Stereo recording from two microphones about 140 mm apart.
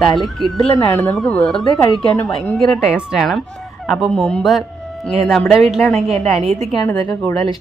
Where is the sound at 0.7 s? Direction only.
25° left (ahead or behind).